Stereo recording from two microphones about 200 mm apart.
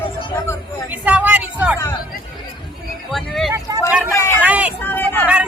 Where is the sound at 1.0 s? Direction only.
10° right (ahead or behind).